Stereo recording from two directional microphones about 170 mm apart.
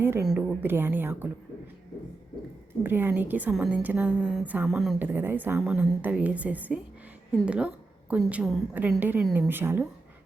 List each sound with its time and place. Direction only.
0.0 s a woman's voice: 15° right (ahead or behind)
2.8 s a woman's voice: 10° right (ahead or behind)